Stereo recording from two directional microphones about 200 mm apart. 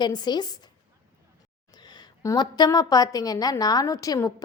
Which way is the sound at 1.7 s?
20° left (ahead or behind).